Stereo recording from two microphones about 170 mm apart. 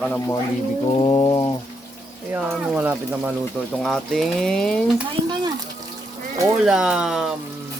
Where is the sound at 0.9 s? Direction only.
25° left (ahead or behind).